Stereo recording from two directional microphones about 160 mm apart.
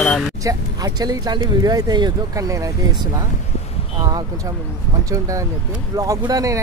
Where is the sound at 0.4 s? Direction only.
20° right (ahead or behind).